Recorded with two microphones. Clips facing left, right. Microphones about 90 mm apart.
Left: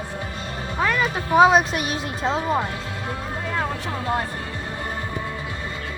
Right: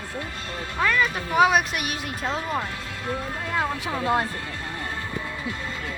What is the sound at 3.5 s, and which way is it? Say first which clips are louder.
Vehicle: right 1 dB; 10° right (ahead or behind).